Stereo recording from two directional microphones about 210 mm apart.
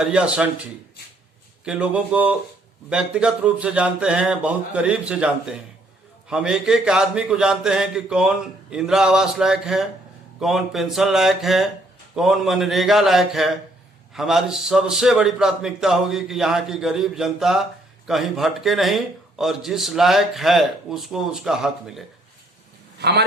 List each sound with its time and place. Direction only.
0.0 s a man's voice: 5° right (ahead or behind)
23.0 s a man's voice: 50° right (ahead or behind)